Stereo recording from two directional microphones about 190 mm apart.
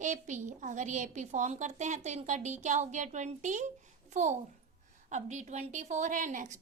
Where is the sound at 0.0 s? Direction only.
40° right (ahead or behind).